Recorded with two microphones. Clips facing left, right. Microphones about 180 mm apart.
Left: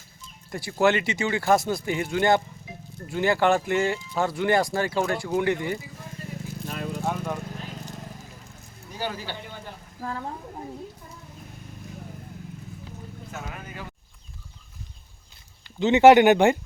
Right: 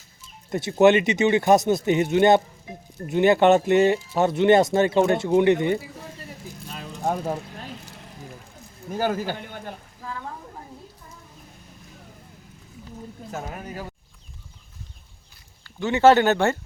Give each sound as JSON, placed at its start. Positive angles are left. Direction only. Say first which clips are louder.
{"t": 0.5, "sound": "speech", "louder": "right 6 dB", "side_deg": -20}
{"t": 6.7, "sound": "a sound", "louder": "left 6 dB", "side_deg": 55}
{"t": 7.0, "sound": "speech", "louder": "right 6 dB", "side_deg": -40}
{"t": 8.9, "sound": "speech", "louder": "right 8 dB", "side_deg": -50}
{"t": 10.0, "sound": "a woman's voice", "louder": "left 4 dB", "side_deg": 45}
{"t": 13.3, "sound": "speech", "louder": "right 5 dB", "side_deg": -35}
{"t": 15.6, "sound": "speech", "louder": "left 2 dB", "side_deg": 20}